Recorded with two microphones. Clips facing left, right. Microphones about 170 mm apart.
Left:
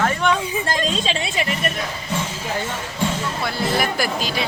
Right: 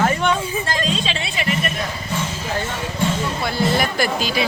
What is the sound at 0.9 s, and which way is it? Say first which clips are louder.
Speech: left 1 dB; 45° left (ahead or behind).